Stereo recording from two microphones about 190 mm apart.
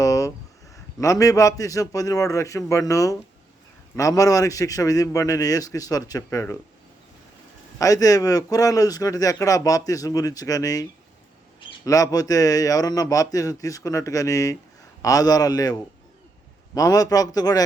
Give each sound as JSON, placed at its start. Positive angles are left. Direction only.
{"t": 0.0, "sound": "a sound", "side_deg": 20}
{"t": 0.9, "sound": "a man's voice", "side_deg": 15}
{"t": 7.8, "sound": "a man's voice", "side_deg": 20}
{"t": 11.9, "sound": "a man's voice", "side_deg": 20}